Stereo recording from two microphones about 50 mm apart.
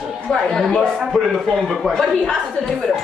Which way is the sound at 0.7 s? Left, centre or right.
Centre.